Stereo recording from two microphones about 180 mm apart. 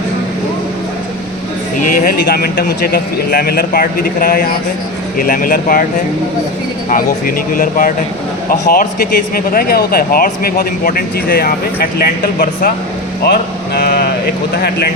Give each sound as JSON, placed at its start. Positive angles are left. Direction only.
{"t": 2.2, "sound": "speech", "side_deg": 60}
{"t": 6.9, "sound": "speech", "side_deg": 50}